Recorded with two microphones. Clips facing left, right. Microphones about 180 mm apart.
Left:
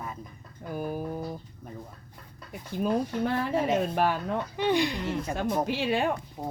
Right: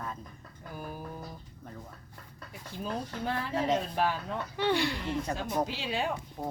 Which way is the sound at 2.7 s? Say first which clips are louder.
Left 10 dB; 65° left (ahead or behind).